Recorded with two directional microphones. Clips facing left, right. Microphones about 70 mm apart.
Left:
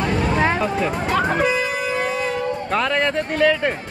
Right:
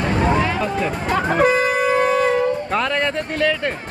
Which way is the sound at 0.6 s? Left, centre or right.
Centre.